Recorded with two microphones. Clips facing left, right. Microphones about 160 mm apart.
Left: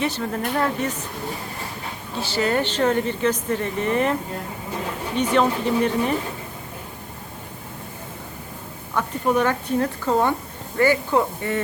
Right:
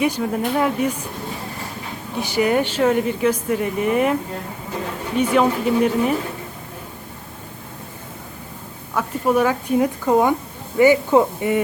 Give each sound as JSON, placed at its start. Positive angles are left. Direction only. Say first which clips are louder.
{"t": 0.0, "sound": "speech", "louder": "right 4 dB", "side_deg": -10}
{"t": 2.1, "sound": "speech", "louder": "right 4 dB", "side_deg": -15}
{"t": 9.0, "sound": "speech", "louder": "right 3 dB", "side_deg": -5}